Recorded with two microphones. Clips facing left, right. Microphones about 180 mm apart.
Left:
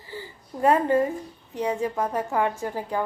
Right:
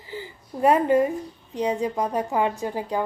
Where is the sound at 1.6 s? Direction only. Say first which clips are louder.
Right 1 dB; 15° right (ahead or behind).